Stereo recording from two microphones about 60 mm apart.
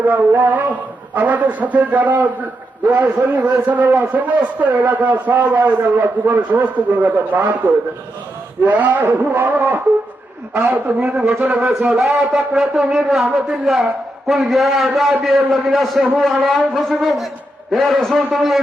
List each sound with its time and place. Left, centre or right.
0.1 s a man's voice: right
8.6 s a man's voice: right
10.8 s a man's voice: right
11.9 s a man's voice: centre